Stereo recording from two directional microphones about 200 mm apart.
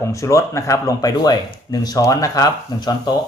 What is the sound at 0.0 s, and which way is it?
Speech, 15° left (ahead or behind).